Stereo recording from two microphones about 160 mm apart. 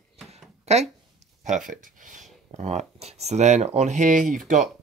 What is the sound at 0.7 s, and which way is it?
Speech, 45° right (ahead or behind).